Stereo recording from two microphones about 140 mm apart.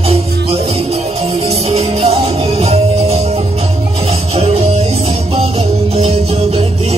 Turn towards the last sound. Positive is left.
turn(degrees=-45)  # may be behind; listen again after turning